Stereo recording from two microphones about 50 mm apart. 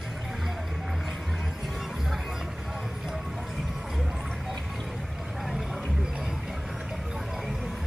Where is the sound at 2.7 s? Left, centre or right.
Centre.